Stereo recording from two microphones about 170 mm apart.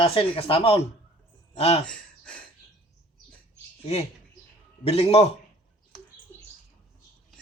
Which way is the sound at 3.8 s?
35° left (ahead or behind).